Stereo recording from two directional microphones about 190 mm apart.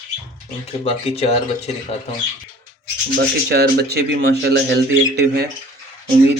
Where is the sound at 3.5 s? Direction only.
60° right (ahead or behind).